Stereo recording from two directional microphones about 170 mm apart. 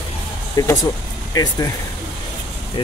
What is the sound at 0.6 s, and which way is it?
Speech, 20° left (ahead or behind).